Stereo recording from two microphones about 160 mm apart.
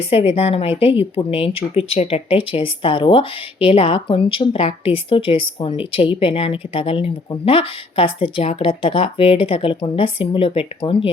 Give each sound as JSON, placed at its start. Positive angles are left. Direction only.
{"t": 0.0, "sound": "speech", "side_deg": 35}